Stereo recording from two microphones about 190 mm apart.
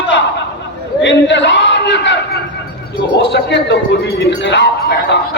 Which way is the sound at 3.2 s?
65° left (ahead or behind).